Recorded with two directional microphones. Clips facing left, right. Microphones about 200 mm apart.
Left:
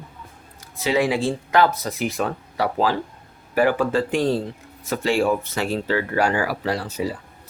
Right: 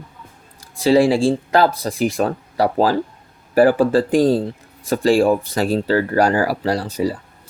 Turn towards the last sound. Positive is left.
turn(degrees=-40)  # may be behind; listen again after turning